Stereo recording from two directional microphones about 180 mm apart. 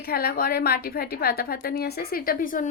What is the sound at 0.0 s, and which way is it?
A woman's voice, 60° left (ahead or behind).